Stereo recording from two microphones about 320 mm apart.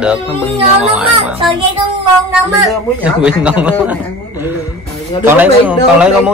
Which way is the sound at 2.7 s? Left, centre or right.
Centre.